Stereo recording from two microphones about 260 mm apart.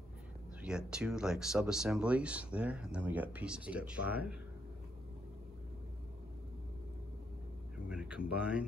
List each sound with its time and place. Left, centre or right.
0.6 s speech: centre
7.9 s a sound: centre
8.4 s speech: centre